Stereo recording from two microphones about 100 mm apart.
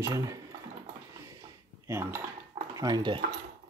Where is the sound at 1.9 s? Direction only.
25° right (ahead or behind).